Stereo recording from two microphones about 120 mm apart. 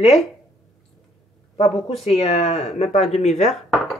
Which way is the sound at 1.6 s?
60° left (ahead or behind).